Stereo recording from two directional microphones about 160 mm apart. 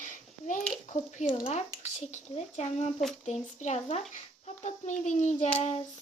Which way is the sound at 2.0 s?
45° left (ahead or behind).